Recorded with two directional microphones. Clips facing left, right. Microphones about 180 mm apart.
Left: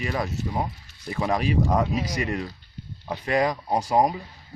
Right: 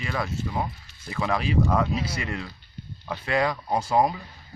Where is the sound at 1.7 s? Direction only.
15° left (ahead or behind).